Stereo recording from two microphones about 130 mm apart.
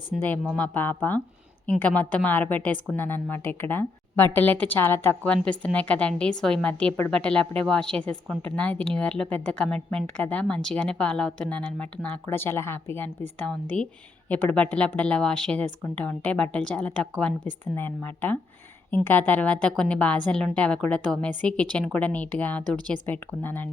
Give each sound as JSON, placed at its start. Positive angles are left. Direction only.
{"t": 0.5, "sound": "a woman's voice", "side_deg": 10}
{"t": 13.5, "sound": "a woman's voice", "side_deg": 5}